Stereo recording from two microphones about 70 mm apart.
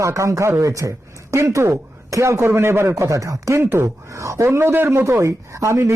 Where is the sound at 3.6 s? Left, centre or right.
Right.